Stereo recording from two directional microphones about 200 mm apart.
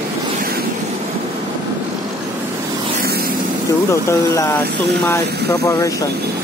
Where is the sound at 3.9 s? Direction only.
15° left (ahead or behind).